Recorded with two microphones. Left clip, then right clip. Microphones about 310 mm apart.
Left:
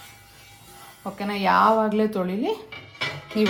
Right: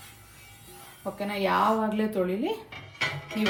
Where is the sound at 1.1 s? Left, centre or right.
Centre.